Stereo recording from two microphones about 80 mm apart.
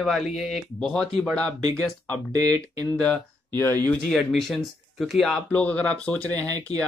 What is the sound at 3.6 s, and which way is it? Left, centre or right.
Speech, left.